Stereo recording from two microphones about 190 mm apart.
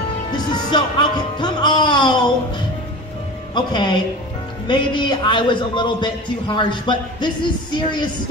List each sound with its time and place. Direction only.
0.3 s music: 20° left (ahead or behind)
3.5 s a man's voice: 25° left (ahead or behind)